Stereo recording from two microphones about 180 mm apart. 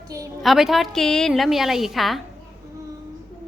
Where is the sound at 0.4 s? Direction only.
Centre (ahead or behind).